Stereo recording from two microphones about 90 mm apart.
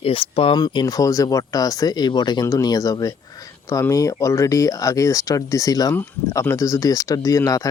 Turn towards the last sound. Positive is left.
turn(degrees=40)  # may be behind; listen again after turning